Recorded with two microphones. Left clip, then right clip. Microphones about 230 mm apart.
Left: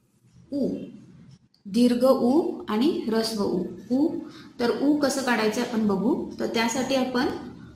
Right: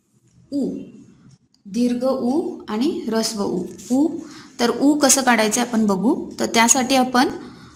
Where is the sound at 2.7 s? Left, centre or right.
Centre.